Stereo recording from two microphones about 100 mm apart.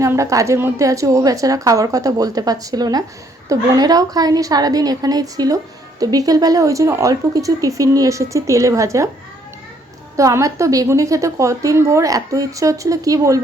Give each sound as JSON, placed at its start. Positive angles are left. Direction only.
{"t": 0.0, "sound": "a woman's voice", "side_deg": -30}
{"t": 10.2, "sound": "a woman's voice", "side_deg": -35}